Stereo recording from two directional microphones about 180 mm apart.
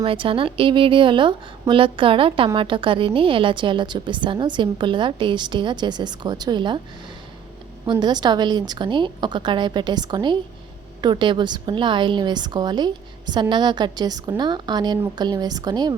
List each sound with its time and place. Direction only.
0.0 s a woman's voice: 30° right (ahead or behind)
7.9 s a woman's voice: 25° right (ahead or behind)